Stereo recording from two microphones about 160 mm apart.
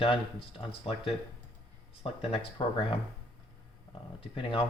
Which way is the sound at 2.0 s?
35° left (ahead or behind).